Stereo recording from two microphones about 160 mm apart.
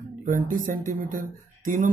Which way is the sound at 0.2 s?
55° right (ahead or behind).